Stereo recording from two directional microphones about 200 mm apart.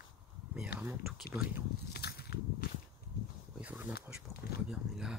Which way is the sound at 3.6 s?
5° right (ahead or behind).